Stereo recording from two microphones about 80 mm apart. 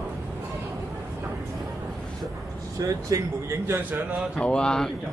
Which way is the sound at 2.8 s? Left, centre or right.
Right.